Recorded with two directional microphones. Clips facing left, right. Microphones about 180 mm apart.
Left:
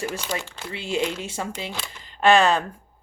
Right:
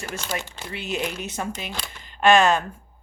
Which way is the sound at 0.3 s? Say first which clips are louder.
Even; 30° left (ahead or behind).